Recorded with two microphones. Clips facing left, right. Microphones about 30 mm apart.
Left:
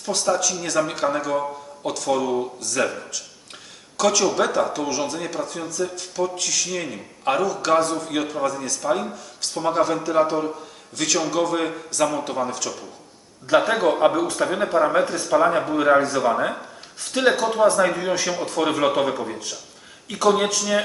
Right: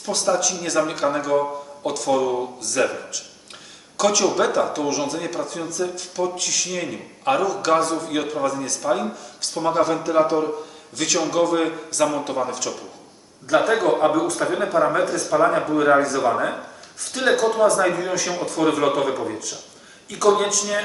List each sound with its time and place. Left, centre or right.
0.0 s speech: centre
20.1 s speech: left
20.6 s speech: centre